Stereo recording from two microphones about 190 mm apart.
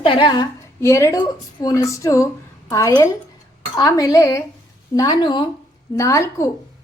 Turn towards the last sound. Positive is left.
turn(degrees=15)  # may be behind; listen again after turning